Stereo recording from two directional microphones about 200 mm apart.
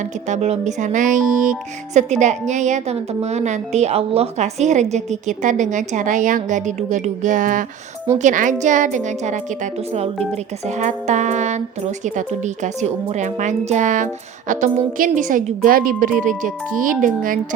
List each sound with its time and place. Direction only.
0.3 s speech: 35° right (ahead or behind)
10.8 s speech: 35° right (ahead or behind)
12.6 s speech: 35° right (ahead or behind)